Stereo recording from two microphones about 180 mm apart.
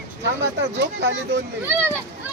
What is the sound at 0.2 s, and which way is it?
Speech, 75° right (ahead or behind).